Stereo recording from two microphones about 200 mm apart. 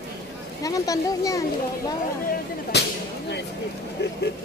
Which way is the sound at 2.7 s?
60° left (ahead or behind).